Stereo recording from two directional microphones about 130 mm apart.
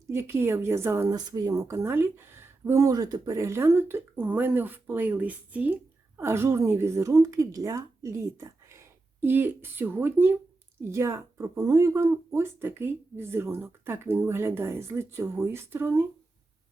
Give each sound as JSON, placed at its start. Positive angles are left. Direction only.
{"t": 0.1, "sound": "speech", "side_deg": -20}
{"t": 1.1, "sound": "speech", "side_deg": -30}